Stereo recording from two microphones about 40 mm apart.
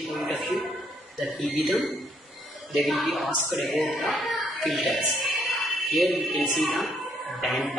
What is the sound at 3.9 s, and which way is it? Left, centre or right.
Speech, centre.